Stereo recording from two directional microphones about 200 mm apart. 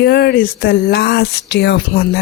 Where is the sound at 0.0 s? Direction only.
55° left (ahead or behind).